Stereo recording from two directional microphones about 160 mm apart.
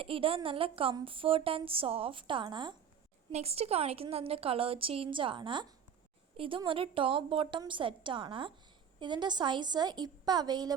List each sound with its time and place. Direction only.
0.0 s a woman's voice: 35° right (ahead or behind)
3.3 s a woman's voice: 40° right (ahead or behind)